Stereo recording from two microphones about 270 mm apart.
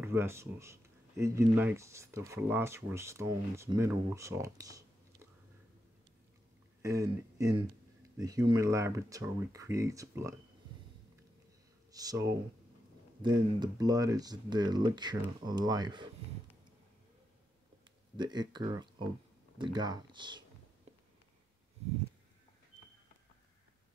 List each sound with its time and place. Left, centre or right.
0.0 s speech: centre
6.8 s speech: centre
11.9 s speech: centre
18.1 s speech: centre